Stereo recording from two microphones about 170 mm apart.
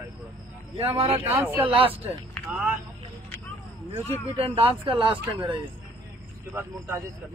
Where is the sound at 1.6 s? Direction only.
35° right (ahead or behind).